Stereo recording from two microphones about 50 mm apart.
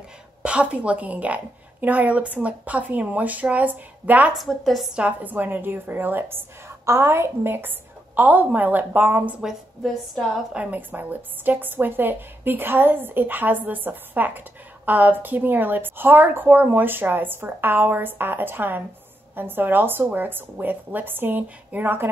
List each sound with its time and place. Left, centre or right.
0.4 s a woman's voice: right
4.5 s a woman's voice: centre
5.2 s a woman's voice: right
6.9 s a woman's voice: right
8.2 s a woman's voice: right
10.5 s a woman's voice: right